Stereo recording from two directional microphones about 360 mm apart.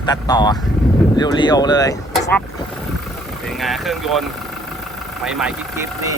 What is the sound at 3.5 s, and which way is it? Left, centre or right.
Speech, centre.